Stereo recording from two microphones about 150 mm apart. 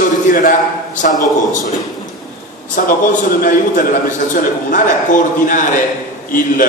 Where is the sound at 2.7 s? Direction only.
65° left (ahead or behind).